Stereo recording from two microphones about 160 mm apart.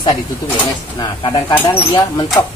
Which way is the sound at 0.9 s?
25° left (ahead or behind).